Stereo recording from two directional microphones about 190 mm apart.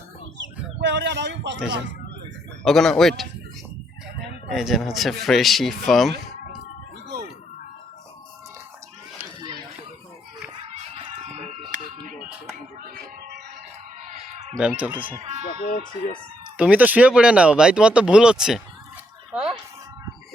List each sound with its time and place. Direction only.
0.3 s bird: 70° right (ahead or behind)
2.6 s speech: centre (ahead or behind)
4.5 s speech: centre (ahead or behind)
10.8 s a sound: 30° right (ahead or behind)
14.0 s a sound: 40° right (ahead or behind)
14.6 s speech: 10° right (ahead or behind)
15.2 s speech: 35° right (ahead or behind)
15.6 s speech: 45° left (ahead or behind)
16.6 s speech: 5° right (ahead or behind)
19.3 s a sound: centre (ahead or behind)